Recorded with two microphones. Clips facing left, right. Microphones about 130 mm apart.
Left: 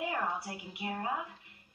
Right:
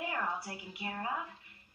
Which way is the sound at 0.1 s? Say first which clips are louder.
Left 2 dB; 20° left (ahead or behind).